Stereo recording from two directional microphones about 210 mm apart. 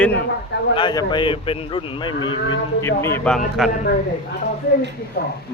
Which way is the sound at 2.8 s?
10° left (ahead or behind).